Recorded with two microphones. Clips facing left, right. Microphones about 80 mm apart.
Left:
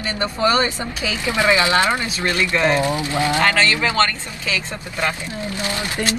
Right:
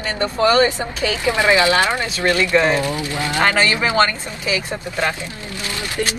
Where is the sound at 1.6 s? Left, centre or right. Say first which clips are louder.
Right 1 dB; left.